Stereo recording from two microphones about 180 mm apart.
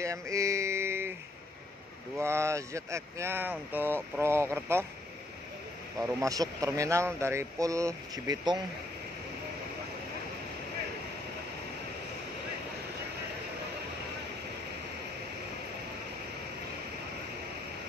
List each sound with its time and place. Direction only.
0.0 s a sound: 15° right (ahead or behind)
2.1 s speech: 15° right (ahead or behind)
5.9 s speech: 20° right (ahead or behind)